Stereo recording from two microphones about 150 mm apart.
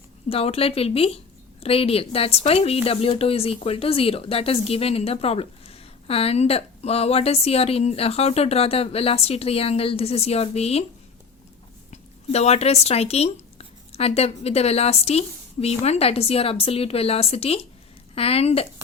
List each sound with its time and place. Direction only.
0.3 s speech: 40° left (ahead or behind)
11.9 s speech: 45° left (ahead or behind)